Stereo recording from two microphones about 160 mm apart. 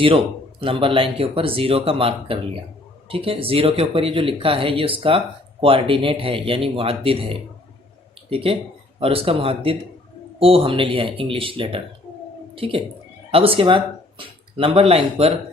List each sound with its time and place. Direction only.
0.6 s speech: 35° right (ahead or behind)